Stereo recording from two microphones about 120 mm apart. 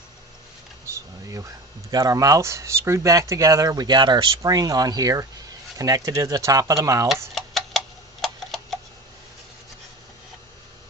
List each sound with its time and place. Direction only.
0.9 s a sound: 25° right (ahead or behind)
1.9 s speech: 30° right (ahead or behind)
7.3 s tick-tock: centre (ahead or behind)